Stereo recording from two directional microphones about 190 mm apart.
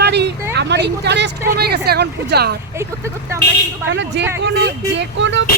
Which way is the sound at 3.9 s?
70° right (ahead or behind).